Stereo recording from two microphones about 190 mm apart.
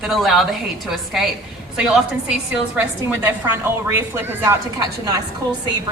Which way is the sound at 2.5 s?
10° right (ahead or behind).